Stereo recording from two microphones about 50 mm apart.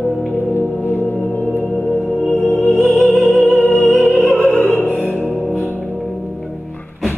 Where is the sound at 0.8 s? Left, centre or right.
Left.